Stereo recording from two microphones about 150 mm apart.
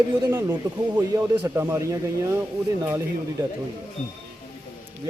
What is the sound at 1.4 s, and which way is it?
Speech, 15° right (ahead or behind).